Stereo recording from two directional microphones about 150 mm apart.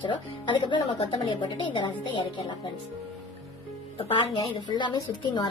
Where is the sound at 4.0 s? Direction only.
35° left (ahead or behind).